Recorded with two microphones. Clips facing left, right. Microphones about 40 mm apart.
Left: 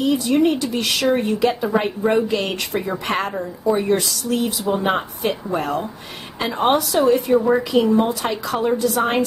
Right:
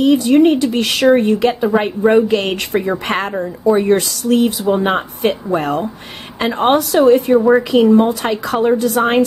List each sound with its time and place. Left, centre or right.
0.0 s a woman's voice: right
1.1 s a woman's voice: right